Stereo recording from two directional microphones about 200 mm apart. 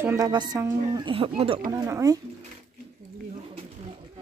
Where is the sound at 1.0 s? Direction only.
25° right (ahead or behind).